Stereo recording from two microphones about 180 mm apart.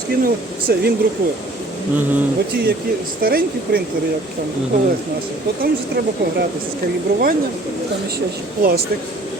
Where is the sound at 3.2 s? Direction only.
55° right (ahead or behind).